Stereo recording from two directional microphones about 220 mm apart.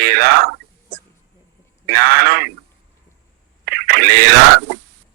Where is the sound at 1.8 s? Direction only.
45° right (ahead or behind).